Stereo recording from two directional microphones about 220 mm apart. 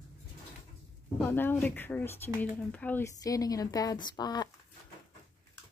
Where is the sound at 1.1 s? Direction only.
10° left (ahead or behind).